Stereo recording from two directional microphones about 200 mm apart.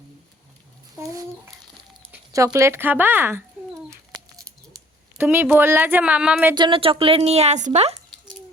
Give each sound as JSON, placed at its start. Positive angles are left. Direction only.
{"t": 0.9, "sound": "a woman's voice", "side_deg": -15}
{"t": 5.1, "sound": "a woman's voice", "side_deg": -10}
{"t": 6.5, "sound": "speech", "side_deg": -25}